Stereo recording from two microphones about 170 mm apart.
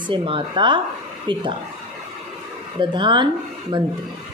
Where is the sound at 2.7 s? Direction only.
30° right (ahead or behind).